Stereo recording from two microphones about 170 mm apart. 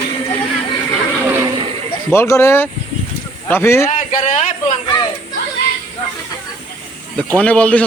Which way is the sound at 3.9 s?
40° left (ahead or behind).